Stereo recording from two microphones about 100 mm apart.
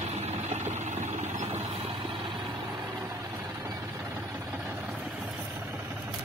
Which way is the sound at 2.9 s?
35° right (ahead or behind).